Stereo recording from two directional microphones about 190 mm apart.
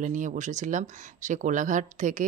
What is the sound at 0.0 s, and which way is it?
Speech, 40° right (ahead or behind).